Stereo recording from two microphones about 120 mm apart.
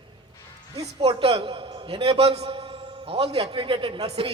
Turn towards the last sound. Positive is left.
turn(degrees=-50)  # may be behind; listen again after turning